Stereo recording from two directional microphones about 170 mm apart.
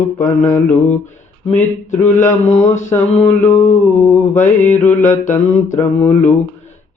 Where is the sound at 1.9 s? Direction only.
45° left (ahead or behind).